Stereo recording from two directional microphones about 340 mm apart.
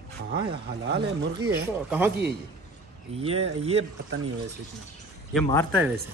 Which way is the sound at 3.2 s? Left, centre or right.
Centre.